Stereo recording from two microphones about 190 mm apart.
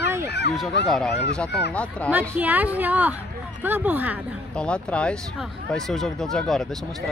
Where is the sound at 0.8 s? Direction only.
Centre (ahead or behind).